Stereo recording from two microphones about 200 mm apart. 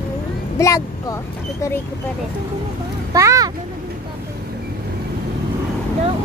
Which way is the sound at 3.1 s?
15° right (ahead or behind).